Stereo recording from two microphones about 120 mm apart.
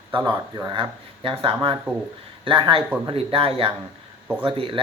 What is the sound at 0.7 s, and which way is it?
Speech, 45° right (ahead or behind).